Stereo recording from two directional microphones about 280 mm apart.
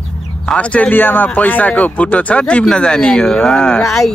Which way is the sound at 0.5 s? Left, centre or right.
Centre.